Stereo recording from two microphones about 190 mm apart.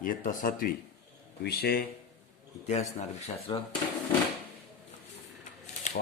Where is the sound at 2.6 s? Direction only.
35° left (ahead or behind).